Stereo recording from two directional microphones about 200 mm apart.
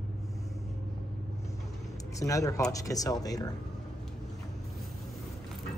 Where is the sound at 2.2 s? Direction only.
15° left (ahead or behind).